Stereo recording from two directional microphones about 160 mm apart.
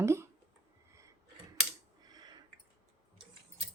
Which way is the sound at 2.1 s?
25° right (ahead or behind).